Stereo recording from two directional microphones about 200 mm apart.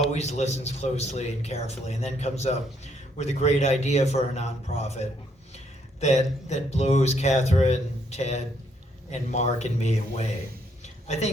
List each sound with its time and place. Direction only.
0.1 s a man's voice: 35° left (ahead or behind)